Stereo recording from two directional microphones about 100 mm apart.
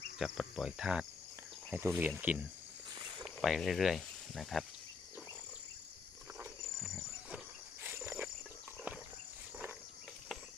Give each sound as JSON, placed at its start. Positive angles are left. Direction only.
{"t": 0.2, "sound": "speech", "side_deg": -5}
{"t": 3.2, "sound": "speech", "side_deg": 0}
{"t": 7.9, "sound": "insect", "side_deg": -25}